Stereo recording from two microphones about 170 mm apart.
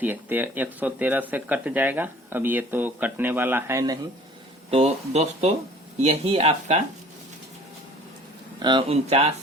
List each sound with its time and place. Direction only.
0.0 s speech: 10° right (ahead or behind)
4.7 s speech: 40° right (ahead or behind)
8.5 s speech: 25° right (ahead or behind)